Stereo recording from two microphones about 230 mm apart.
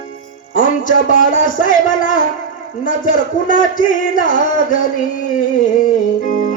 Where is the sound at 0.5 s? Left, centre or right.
Left.